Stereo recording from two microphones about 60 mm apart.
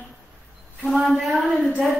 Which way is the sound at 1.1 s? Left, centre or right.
Centre.